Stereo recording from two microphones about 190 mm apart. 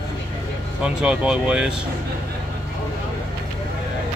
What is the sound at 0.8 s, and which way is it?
Speech, 5° right (ahead or behind).